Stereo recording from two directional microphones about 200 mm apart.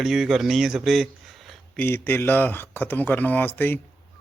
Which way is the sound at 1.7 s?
10° left (ahead or behind).